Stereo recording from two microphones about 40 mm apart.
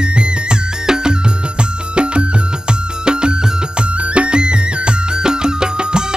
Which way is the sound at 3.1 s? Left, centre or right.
Right.